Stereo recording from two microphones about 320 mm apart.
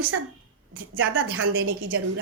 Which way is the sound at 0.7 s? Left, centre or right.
Right.